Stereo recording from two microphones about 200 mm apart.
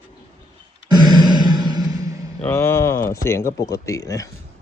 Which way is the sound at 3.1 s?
15° left (ahead or behind).